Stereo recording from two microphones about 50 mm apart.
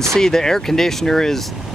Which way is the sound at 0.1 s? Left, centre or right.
Centre.